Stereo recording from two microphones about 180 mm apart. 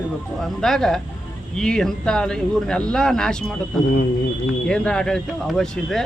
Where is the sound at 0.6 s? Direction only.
Centre (ahead or behind).